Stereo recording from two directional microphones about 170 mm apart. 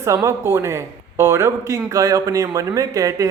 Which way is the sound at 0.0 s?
20° right (ahead or behind).